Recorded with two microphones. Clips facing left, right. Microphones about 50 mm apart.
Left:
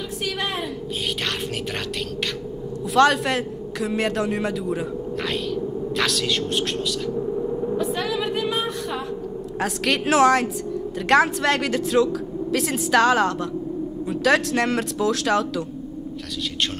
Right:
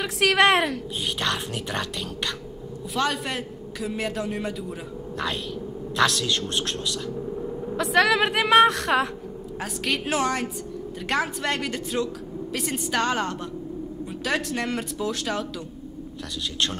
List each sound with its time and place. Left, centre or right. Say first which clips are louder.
0.2 s a woman's voice: right 10 dB; right
3.0 s speech: left 9 dB; left
7.2 s a sound: left 6 dB; centre
7.7 s a woman's voice: right 9 dB; right
9.6 s speech: left 5 dB; left